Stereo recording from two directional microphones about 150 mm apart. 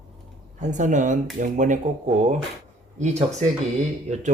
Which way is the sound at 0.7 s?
55° right (ahead or behind).